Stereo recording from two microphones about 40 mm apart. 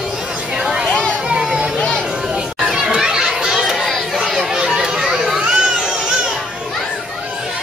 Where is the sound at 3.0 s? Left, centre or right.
Centre.